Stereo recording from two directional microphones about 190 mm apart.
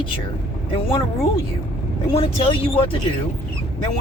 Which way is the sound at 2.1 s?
30° left (ahead or behind).